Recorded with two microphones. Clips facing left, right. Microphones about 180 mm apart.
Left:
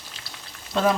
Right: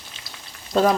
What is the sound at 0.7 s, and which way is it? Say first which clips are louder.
Speech: right 4 dB; 40° right (ahead or behind).